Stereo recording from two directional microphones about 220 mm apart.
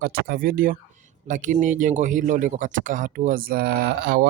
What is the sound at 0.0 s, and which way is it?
Speech, 45° right (ahead or behind).